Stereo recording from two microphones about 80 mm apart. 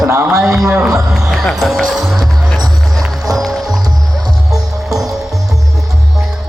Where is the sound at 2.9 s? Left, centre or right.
Centre.